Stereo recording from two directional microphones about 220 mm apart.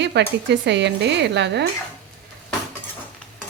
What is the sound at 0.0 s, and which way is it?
A woman's voice, 50° right (ahead or behind).